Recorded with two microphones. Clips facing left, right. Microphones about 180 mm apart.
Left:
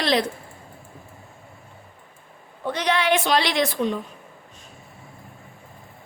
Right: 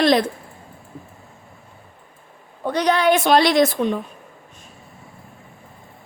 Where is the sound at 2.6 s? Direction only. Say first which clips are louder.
Right 5 dB; 40° right (ahead or behind).